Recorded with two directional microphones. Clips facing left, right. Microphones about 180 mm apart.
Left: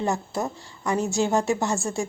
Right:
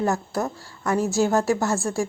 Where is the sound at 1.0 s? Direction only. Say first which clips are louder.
Right 4 dB; centre (ahead or behind).